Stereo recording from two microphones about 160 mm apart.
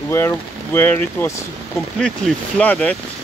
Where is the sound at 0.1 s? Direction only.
15° left (ahead or behind).